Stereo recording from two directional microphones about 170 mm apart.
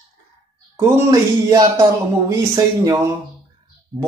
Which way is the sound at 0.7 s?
15° right (ahead or behind).